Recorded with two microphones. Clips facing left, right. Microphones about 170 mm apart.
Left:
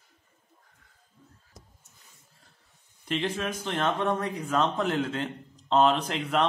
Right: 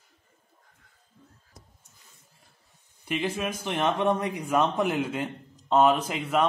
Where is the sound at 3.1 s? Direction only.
10° right (ahead or behind).